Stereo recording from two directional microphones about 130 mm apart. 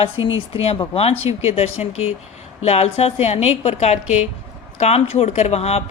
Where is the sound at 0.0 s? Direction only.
50° left (ahead or behind).